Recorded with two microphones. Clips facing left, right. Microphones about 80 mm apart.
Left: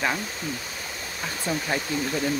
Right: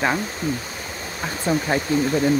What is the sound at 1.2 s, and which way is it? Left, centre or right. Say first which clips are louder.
Speech: right 6 dB; right.